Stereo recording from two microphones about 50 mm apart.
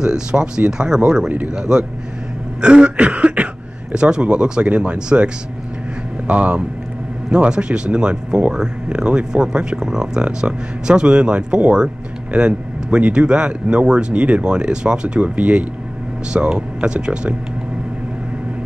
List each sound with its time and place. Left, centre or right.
0.0 s speech: centre
2.6 s cough: centre
3.9 s speech: centre